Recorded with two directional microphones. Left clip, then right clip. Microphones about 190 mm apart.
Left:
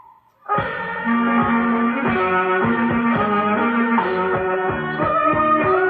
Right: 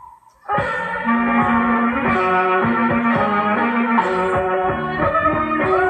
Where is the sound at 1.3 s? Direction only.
25° right (ahead or behind).